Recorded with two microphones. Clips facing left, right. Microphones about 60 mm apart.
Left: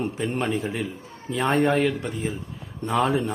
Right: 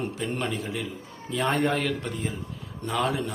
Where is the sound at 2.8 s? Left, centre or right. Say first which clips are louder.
Left 5 dB; left.